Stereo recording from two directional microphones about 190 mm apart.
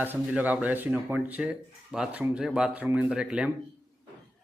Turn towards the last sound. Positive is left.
turn(degrees=-5)  # may be behind; listen again after turning